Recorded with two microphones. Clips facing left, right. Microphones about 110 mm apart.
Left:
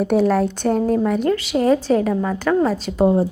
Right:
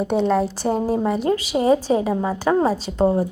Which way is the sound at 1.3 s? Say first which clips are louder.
Right 1 dB; 15° right (ahead or behind).